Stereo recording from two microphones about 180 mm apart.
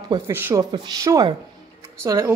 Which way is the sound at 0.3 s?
10° right (ahead or behind).